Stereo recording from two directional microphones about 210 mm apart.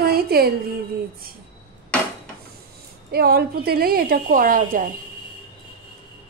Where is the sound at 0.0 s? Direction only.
45° right (ahead or behind).